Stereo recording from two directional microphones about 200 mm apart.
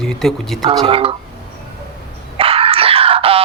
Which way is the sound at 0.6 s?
30° right (ahead or behind).